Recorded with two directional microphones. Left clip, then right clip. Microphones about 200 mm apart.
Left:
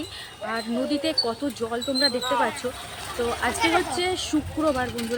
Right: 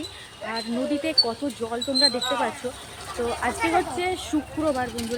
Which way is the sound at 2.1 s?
45° left (ahead or behind).